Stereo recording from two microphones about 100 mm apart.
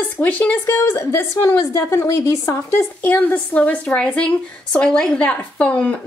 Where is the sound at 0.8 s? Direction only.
25° left (ahead or behind).